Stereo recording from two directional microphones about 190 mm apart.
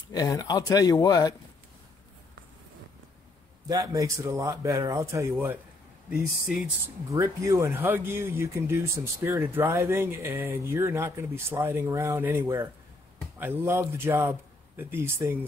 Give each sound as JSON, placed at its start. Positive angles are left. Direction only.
{"t": 0.1, "sound": "speech", "side_deg": 20}
{"t": 3.6, "sound": "speech", "side_deg": -20}
{"t": 7.2, "sound": "speech", "side_deg": -15}